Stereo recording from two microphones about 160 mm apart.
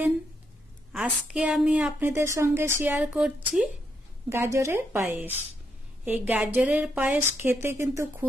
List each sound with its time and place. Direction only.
0.9 s a woman's voice: 10° right (ahead or behind)